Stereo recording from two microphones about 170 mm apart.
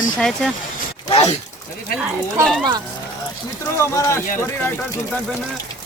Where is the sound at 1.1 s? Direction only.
35° left (ahead or behind).